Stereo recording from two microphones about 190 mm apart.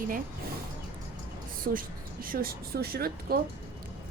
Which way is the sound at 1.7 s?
50° right (ahead or behind).